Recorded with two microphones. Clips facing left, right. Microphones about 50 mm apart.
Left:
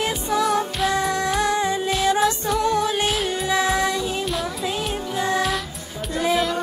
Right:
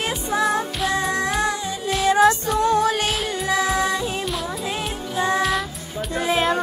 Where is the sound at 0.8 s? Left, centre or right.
Centre.